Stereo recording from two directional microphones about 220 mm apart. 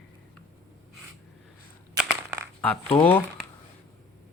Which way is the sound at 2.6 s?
5° left (ahead or behind).